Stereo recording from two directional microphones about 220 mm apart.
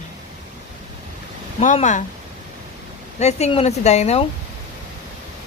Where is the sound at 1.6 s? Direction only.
35° left (ahead or behind).